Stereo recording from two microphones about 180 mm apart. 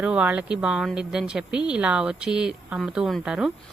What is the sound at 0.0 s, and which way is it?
A woman's voice, 5° right (ahead or behind).